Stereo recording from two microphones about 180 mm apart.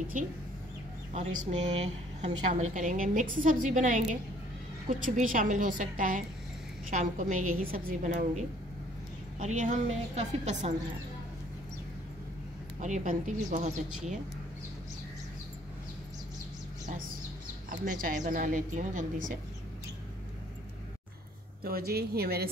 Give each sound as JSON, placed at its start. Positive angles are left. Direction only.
{"t": 0.2, "sound": "a woman's voice", "side_deg": -45}
{"t": 12.8, "sound": "a woman's voice", "side_deg": -40}
{"t": 17.6, "sound": "a woman's voice", "side_deg": -50}
{"t": 21.6, "sound": "a woman's voice", "side_deg": -60}